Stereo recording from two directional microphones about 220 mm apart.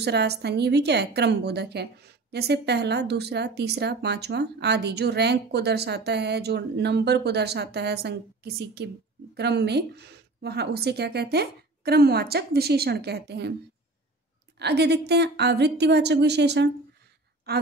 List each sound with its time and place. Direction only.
0.0 s speech: 50° right (ahead or behind)
14.6 s speech: 50° right (ahead or behind)